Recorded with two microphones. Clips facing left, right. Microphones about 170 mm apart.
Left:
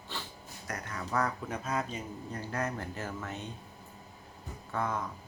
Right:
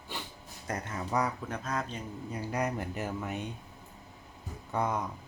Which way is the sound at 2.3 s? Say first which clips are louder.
Right 3 dB; 15° right (ahead or behind).